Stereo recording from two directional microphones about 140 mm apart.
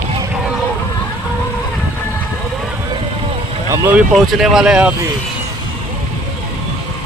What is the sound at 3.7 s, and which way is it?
Speech, 20° right (ahead or behind).